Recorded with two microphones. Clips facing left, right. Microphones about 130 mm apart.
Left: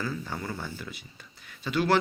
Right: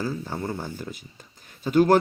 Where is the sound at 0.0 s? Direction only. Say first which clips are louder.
Right 4 dB; 35° right (ahead or behind).